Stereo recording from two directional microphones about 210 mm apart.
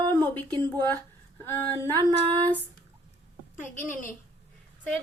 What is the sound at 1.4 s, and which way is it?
Speech, 10° left (ahead or behind).